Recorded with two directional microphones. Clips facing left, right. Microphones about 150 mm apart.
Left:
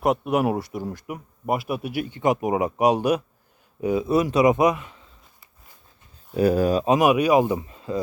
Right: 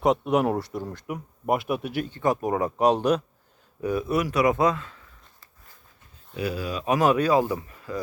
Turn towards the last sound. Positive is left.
turn(degrees=25)  # may be behind; listen again after turning